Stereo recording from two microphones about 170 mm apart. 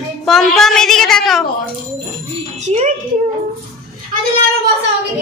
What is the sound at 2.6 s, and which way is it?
Speech, 45° right (ahead or behind).